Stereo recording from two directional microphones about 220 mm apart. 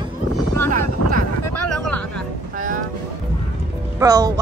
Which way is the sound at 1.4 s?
90° left.